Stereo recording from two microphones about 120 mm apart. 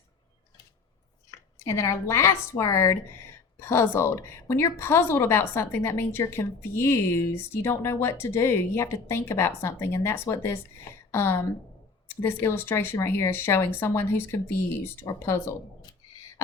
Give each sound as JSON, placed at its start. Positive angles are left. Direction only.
{"t": 1.5, "sound": "speech", "side_deg": 25}